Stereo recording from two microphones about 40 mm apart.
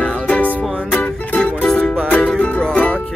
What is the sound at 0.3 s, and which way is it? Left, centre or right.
Music, left.